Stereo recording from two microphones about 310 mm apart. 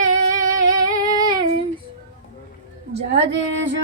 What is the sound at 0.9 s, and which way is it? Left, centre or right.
Humming, centre.